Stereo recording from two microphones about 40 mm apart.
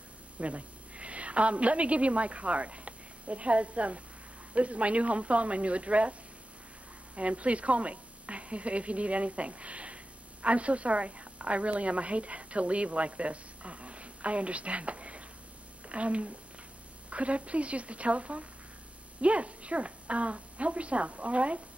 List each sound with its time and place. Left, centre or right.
0.4 s a woman's voice: right
7.2 s a woman's voice: right